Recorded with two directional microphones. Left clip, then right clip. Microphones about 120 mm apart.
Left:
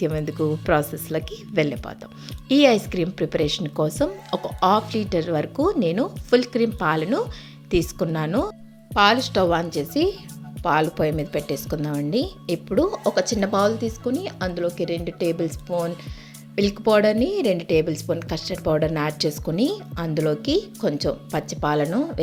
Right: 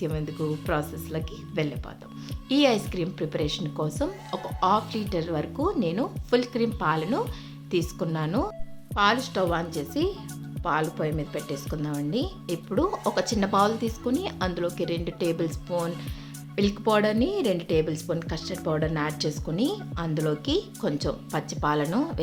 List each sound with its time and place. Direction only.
0.0 s speech: 50° left (ahead or behind)
2.5 s a woman's voice: 40° left (ahead or behind); by 15.5 s 20° left (ahead or behind)
16.6 s a woman's voice: 30° left (ahead or behind)